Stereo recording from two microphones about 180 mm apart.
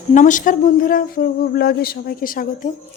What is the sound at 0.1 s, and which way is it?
Speech, 45° left (ahead or behind).